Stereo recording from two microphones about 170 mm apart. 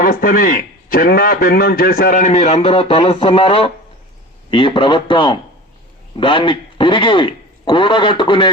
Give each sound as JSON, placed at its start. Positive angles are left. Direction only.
{"t": 0.0, "sound": "a man's voice", "side_deg": 55}